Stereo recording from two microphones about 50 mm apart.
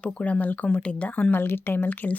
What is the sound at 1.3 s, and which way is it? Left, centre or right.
Speech, left.